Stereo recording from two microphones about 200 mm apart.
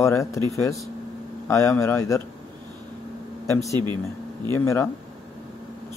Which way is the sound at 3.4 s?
15° left (ahead or behind).